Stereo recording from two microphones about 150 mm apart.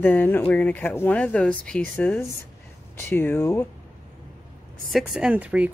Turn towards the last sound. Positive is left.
turn(degrees=-10)  # may be behind; listen again after turning